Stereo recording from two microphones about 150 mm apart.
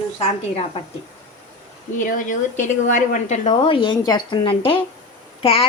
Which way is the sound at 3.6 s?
35° left (ahead or behind).